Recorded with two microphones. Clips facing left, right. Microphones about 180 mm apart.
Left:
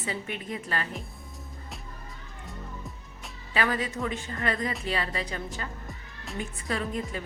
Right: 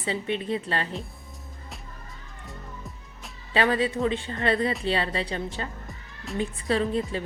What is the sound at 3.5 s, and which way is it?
A woman's voice, 30° right (ahead or behind).